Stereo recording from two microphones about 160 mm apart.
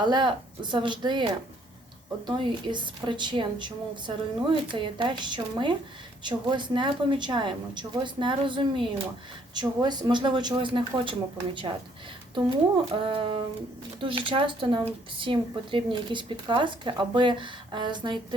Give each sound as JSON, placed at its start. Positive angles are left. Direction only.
{"t": 0.0, "sound": "a woman's voice", "side_deg": -30}
{"t": 12.9, "sound": "speech", "side_deg": -35}